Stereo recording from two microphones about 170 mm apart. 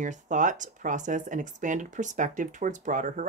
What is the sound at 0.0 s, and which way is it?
Speech, 45° right (ahead or behind).